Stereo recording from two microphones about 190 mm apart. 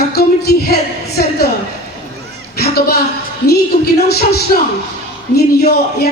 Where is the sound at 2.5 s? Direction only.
55° left (ahead or behind).